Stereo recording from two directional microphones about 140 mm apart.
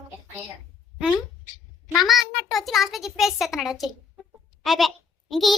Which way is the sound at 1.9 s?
Centre (ahead or behind).